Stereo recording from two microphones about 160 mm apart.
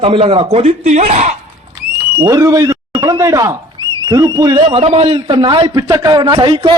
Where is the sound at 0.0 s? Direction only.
35° right (ahead or behind).